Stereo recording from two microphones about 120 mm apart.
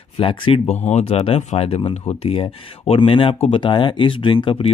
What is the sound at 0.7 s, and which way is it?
Speech, 65° left (ahead or behind).